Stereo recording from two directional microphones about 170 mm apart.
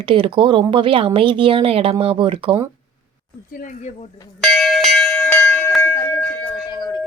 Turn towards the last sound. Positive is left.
turn(degrees=25)  # may be behind; listen again after turning